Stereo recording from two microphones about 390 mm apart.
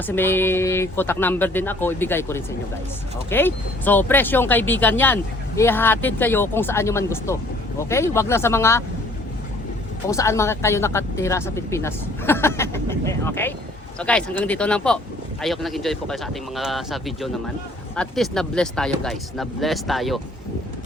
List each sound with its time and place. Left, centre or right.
0.1 s speech: centre
10.1 s speech: centre